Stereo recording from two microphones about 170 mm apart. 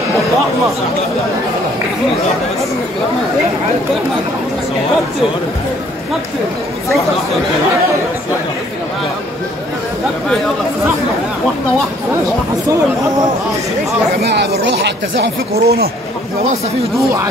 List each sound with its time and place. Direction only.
14.2 s speech: 80° right